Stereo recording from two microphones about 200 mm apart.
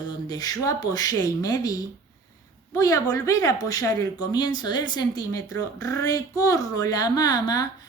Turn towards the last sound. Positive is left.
turn(degrees=20)  # may be behind; listen again after turning